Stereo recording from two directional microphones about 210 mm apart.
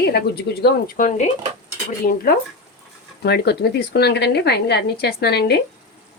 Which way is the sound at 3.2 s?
50° left (ahead or behind).